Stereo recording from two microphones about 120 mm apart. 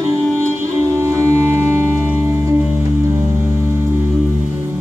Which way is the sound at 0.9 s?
20° right (ahead or behind).